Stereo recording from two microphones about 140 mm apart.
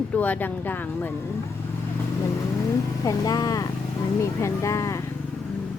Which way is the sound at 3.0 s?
25° left (ahead or behind).